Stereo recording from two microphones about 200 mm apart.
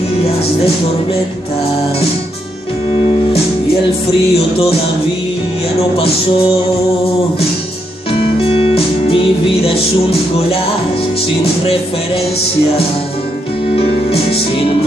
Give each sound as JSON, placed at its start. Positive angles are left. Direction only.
{"t": 4.4, "sound": "music", "side_deg": 30}
{"t": 5.9, "sound": "music", "side_deg": 30}
{"t": 8.1, "sound": "music", "side_deg": 30}
{"t": 13.7, "sound": "music", "side_deg": 30}